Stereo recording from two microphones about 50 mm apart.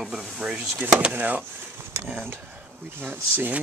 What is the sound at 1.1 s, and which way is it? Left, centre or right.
Speech, right.